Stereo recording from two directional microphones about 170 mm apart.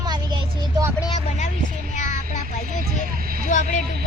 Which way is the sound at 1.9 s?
45° left (ahead or behind).